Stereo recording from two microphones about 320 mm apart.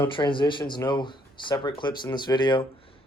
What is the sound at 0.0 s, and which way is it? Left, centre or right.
Speech, centre.